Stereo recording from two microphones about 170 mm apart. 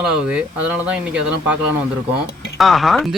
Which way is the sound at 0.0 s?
5° right (ahead or behind).